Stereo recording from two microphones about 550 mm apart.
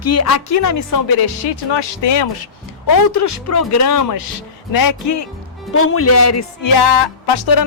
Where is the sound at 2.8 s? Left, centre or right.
Left.